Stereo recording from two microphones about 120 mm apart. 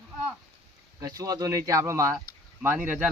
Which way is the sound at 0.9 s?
30° right (ahead or behind).